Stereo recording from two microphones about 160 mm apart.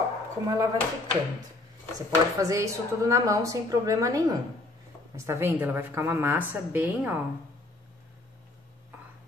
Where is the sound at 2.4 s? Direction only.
20° right (ahead or behind).